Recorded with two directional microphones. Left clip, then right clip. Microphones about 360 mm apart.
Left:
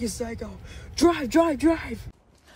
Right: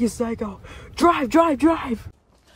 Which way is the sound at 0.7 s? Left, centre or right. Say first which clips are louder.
Right 5 dB; centre.